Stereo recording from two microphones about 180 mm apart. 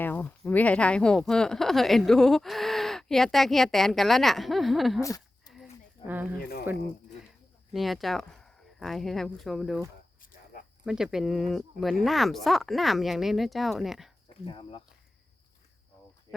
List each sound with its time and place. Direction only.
0.0 s speech: 10° left (ahead or behind)
6.1 s speech: 10° right (ahead or behind)
6.4 s speech: 55° left (ahead or behind)
7.7 s speech: centre (ahead or behind)
10.8 s speech: 5° right (ahead or behind)
14.4 s speech: 30° left (ahead or behind)